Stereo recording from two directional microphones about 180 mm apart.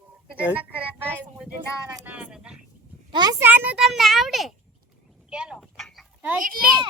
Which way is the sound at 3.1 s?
20° right (ahead or behind).